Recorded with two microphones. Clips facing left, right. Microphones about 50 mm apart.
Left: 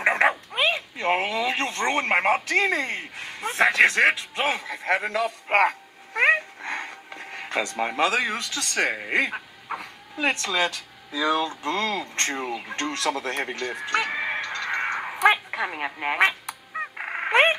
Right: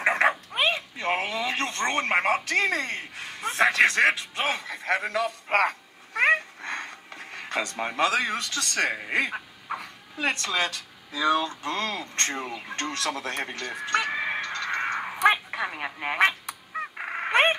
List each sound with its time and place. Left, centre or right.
0.0 s dog: centre
0.6 s a sound: centre
7.9 s speech: centre
14.0 s a sound: centre
16.9 s fowl: centre
17.3 s frog: left